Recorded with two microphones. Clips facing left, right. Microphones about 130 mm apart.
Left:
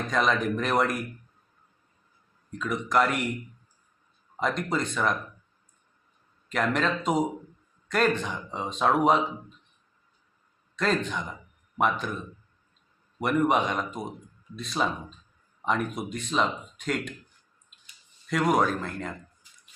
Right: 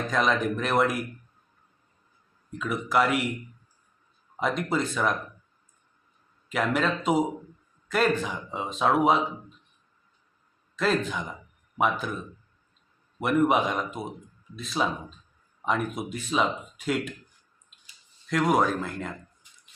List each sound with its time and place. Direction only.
0.1 s speech: centre (ahead or behind)
2.5 s speech: 5° right (ahead or behind)
4.4 s speech: 5° right (ahead or behind)
6.5 s speech: 5° right (ahead or behind)
10.8 s speech: 5° right (ahead or behind)
18.3 s speech: centre (ahead or behind)